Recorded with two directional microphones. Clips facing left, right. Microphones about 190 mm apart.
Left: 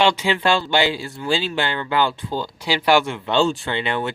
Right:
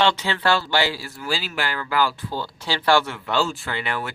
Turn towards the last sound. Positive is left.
turn(degrees=25)  # may be behind; listen again after turning